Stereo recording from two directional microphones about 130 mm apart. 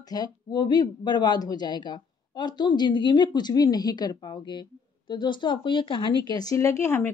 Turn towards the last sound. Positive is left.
turn(degrees=20)  # may be behind; listen again after turning